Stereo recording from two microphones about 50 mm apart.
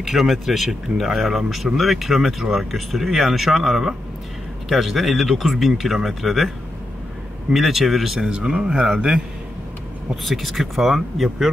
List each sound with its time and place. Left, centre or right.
0.0 s speech: centre
7.5 s speech: centre
8.2 s speech: centre
10.2 s speech: centre